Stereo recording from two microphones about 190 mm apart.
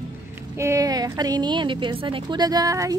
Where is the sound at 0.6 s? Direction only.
15° right (ahead or behind).